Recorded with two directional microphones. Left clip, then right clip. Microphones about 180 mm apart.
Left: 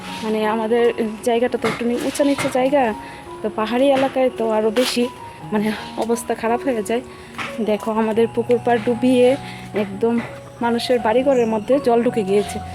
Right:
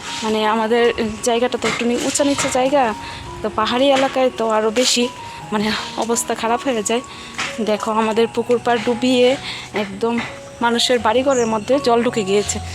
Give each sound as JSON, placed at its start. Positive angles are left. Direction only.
{"t": 0.3, "sound": "speech", "side_deg": -10}
{"t": 10.0, "sound": "speech", "side_deg": 25}
{"t": 10.6, "sound": "speech", "side_deg": -5}